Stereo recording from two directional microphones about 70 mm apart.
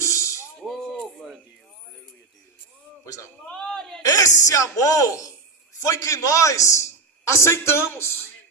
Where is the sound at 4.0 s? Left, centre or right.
Left.